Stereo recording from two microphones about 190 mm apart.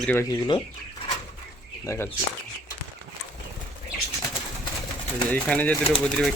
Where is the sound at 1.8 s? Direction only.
15° left (ahead or behind).